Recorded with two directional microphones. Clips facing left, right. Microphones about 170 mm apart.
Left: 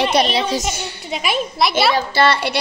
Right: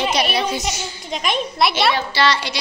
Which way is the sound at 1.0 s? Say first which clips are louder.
Left 1 dB; 5° left (ahead or behind).